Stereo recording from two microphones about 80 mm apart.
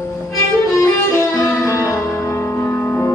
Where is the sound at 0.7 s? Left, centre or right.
Left.